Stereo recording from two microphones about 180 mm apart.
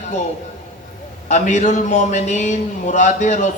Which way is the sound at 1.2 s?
40° left (ahead or behind).